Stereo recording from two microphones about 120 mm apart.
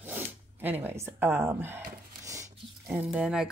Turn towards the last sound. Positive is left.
turn(degrees=-5)  # may be behind; listen again after turning